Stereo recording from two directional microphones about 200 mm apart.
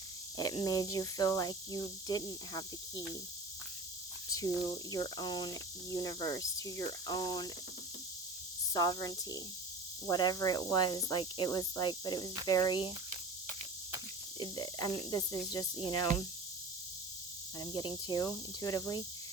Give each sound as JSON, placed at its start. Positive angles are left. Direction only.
{"t": 0.3, "sound": "speech", "side_deg": 20}
{"t": 4.3, "sound": "speech", "side_deg": 15}
{"t": 8.7, "sound": "speech", "side_deg": 20}
{"t": 14.3, "sound": "speech", "side_deg": 20}
{"t": 17.7, "sound": "speech", "side_deg": 20}